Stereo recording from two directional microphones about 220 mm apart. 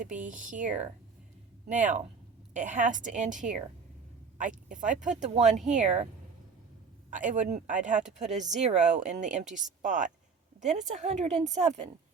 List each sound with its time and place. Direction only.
0.0 s speech: 35° right (ahead or behind)
7.1 s speech: 35° right (ahead or behind)